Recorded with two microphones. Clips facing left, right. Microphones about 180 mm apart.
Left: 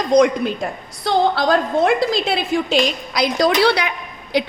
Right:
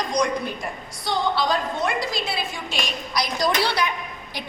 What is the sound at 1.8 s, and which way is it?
A woman's voice, 90° left.